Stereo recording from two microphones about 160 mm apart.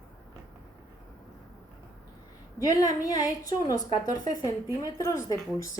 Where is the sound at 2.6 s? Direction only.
20° left (ahead or behind).